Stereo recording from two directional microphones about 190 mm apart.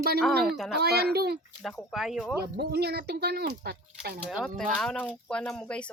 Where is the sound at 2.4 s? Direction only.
55° right (ahead or behind).